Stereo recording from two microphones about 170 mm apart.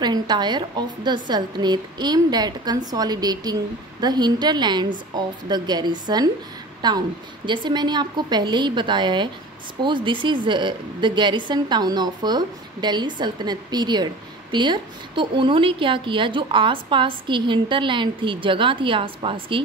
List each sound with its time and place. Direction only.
0.0 s a woman's voice: 25° right (ahead or behind)